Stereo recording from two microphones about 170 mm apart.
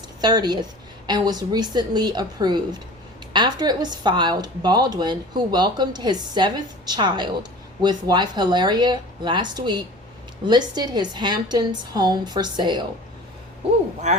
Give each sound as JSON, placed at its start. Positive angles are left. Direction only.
{"t": 0.2, "sound": "a woman's voice", "side_deg": -25}
{"t": 14.0, "sound": "speech", "side_deg": -45}